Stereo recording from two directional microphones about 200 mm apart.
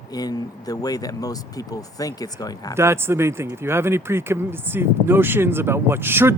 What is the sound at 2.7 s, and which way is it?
Speech, 15° right (ahead or behind).